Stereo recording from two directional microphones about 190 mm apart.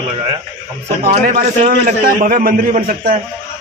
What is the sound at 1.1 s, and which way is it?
A man's voice, 50° right (ahead or behind).